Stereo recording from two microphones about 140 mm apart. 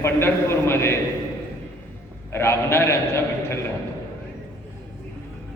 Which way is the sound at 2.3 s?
20° left (ahead or behind).